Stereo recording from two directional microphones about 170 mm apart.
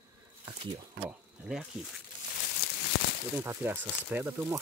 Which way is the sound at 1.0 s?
5° right (ahead or behind).